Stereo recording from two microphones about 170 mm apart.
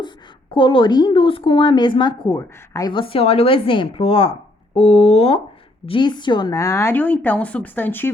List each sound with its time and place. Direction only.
0.5 s a woman's voice: 30° left (ahead or behind); by 8.1 s 10° left (ahead or behind)